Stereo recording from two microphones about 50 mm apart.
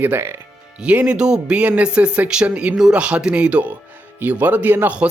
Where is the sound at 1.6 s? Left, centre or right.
Right.